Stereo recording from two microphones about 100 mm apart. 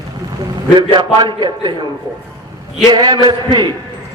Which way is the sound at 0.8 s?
50° right (ahead or behind).